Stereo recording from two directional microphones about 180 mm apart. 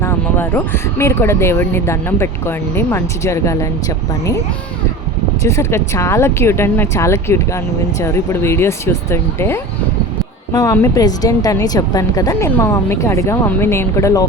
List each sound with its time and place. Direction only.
0.0 s speech: 10° left (ahead or behind)
5.4 s speech: 15° left (ahead or behind)